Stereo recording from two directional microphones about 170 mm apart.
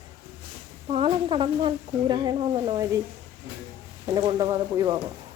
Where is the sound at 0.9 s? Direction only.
30° right (ahead or behind).